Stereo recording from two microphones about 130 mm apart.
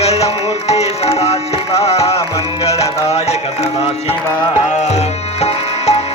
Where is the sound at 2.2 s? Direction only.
25° left (ahead or behind).